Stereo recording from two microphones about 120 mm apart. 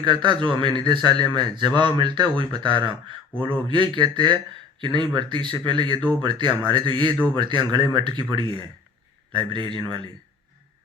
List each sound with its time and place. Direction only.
0.0 s a man's voice: 40° right (ahead or behind)